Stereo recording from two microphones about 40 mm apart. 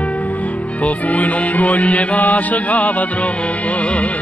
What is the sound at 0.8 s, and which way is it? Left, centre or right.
Music, left.